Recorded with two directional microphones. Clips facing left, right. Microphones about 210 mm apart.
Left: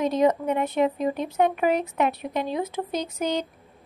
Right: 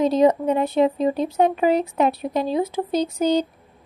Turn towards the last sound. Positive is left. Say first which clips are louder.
# right 7 dB
turn(degrees=-30)  # may be behind; listen again after turning